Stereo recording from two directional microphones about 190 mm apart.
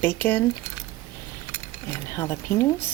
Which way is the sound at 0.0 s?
10° left (ahead or behind).